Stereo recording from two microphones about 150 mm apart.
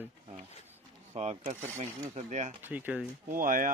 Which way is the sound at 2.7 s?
10° right (ahead or behind).